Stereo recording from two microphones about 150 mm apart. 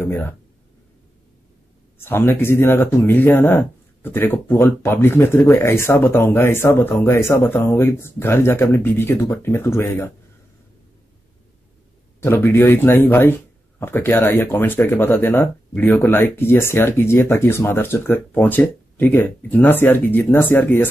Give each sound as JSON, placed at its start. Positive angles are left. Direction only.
{"t": 0.0, "sound": "speech", "side_deg": 15}
{"t": 2.0, "sound": "speech", "side_deg": 15}
{"t": 12.2, "sound": "speech", "side_deg": 15}